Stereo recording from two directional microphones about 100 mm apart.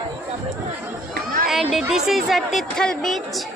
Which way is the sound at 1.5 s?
Centre (ahead or behind).